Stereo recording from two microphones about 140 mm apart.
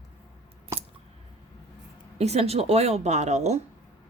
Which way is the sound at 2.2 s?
50° right (ahead or behind).